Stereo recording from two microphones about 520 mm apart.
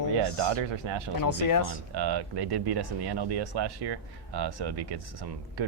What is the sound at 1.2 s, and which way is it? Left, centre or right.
Speech, left.